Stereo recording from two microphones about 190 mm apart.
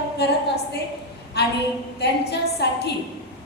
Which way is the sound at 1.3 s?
60° left (ahead or behind).